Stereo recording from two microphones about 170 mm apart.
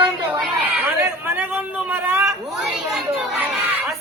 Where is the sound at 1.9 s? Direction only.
10° right (ahead or behind).